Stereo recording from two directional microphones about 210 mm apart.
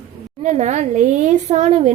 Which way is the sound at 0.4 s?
35° right (ahead or behind).